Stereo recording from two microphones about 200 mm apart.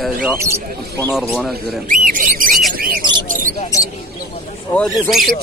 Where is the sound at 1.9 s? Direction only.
45° right (ahead or behind).